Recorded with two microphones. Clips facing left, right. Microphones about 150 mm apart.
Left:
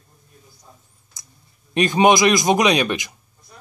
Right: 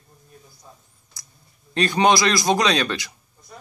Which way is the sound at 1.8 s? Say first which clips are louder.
Left 3 dB; 20° left (ahead or behind).